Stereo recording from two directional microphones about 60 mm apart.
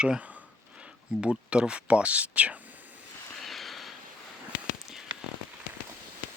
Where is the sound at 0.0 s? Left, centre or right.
Centre.